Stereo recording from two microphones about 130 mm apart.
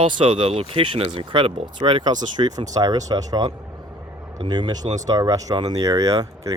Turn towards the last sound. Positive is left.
turn(degrees=-25)  # may be behind; listen again after turning